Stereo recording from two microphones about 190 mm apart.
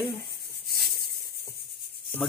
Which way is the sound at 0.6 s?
55° left (ahead or behind).